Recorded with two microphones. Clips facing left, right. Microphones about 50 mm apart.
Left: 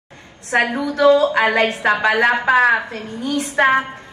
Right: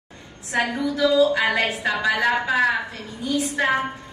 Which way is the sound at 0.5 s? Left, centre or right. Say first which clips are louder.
Left 5 dB; left.